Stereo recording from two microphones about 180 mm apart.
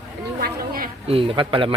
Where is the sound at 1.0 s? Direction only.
30° right (ahead or behind).